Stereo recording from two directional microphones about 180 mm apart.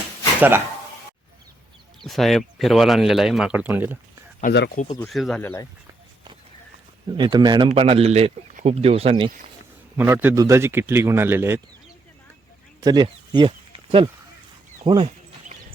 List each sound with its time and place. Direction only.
0.3 s speech: 10° right (ahead or behind)
2.0 s speech: centre (ahead or behind)
4.5 s speech: 70° left (ahead or behind)
5.0 s speech: centre (ahead or behind)
5.4 s speech: 10° left (ahead or behind)
7.1 s speech: 25° right (ahead or behind)
10.0 s a man's voice: 10° right (ahead or behind)
12.8 s a sound: 20° right (ahead or behind)
14.8 s speech: 30° right (ahead or behind)